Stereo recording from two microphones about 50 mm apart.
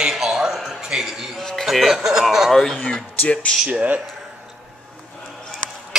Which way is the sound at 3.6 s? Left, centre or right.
Right.